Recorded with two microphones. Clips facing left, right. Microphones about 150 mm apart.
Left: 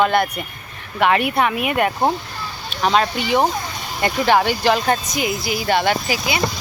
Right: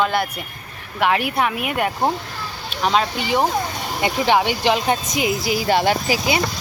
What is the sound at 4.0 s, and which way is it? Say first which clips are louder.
Speech: left 1 dB; 10° right (ahead or behind).